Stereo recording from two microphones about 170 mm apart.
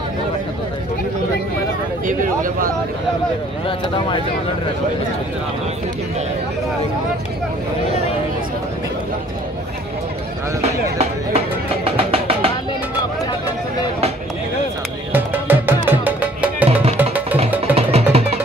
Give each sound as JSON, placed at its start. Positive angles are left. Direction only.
{"t": 2.0, "sound": "speech", "side_deg": -50}
{"t": 3.6, "sound": "speech", "side_deg": 30}
{"t": 10.6, "sound": "music", "side_deg": -40}
{"t": 15.1, "sound": "music", "side_deg": -10}
{"t": 17.7, "sound": "music", "side_deg": -35}